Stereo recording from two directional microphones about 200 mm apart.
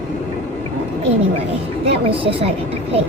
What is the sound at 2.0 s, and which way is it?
Speech, 25° right (ahead or behind).